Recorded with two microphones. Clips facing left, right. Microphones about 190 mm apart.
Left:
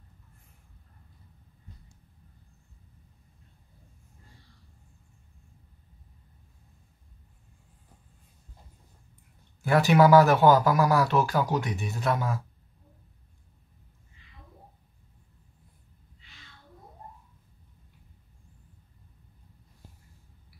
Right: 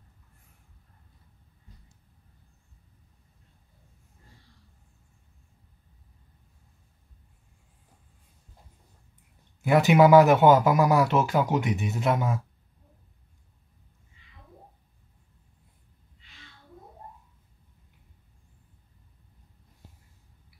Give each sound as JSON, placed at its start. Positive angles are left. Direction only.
{"t": 9.6, "sound": "a man's voice", "side_deg": -20}